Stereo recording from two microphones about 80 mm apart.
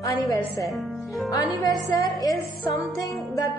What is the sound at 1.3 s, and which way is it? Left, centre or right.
Music, left.